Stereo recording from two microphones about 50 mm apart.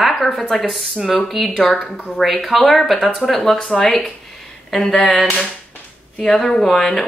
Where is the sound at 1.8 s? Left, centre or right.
Centre.